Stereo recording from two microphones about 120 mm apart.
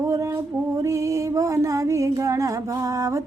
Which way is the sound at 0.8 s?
25° right (ahead or behind).